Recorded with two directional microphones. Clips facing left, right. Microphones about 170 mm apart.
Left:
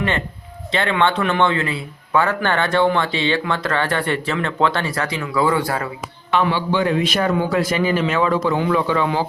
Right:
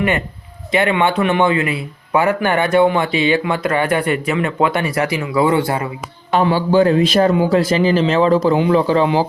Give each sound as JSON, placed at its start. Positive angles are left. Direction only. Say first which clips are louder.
{"t": 0.7, "sound": "speech", "louder": "right 3 dB", "side_deg": -15}
{"t": 6.5, "sound": "speech", "louder": "right 6 dB", "side_deg": -40}